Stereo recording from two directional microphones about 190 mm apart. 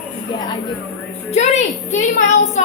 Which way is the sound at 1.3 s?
35° left (ahead or behind).